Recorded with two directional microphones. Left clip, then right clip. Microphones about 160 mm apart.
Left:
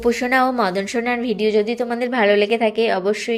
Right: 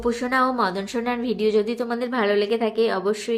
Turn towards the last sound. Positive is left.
turn(degrees=10)  # may be behind; listen again after turning